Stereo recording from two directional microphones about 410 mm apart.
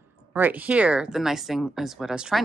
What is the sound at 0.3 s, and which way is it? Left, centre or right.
Speech, centre.